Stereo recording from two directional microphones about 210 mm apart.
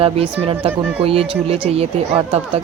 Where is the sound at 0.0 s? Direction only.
25° right (ahead or behind).